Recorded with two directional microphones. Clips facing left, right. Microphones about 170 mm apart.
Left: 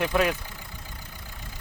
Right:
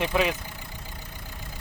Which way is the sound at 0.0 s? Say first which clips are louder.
Left 1 dB; centre (ahead or behind).